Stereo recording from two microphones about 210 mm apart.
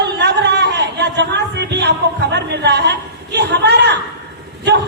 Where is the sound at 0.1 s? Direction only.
55° right (ahead or behind).